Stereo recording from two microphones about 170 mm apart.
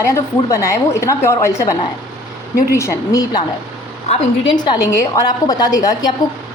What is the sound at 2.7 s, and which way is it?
A woman's voice, 15° left (ahead or behind).